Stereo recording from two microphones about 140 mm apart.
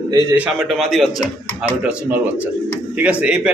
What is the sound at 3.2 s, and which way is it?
Speech, 10° right (ahead or behind).